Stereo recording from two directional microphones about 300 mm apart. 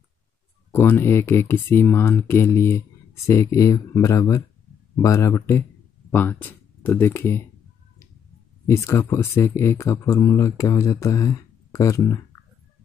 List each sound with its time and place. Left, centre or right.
0.7 s speech: centre
8.6 s speech: centre